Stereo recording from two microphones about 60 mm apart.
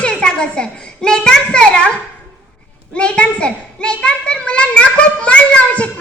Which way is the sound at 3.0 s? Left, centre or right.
Centre.